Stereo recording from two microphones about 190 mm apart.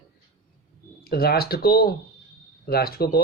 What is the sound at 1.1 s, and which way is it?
Speech, 55° left (ahead or behind).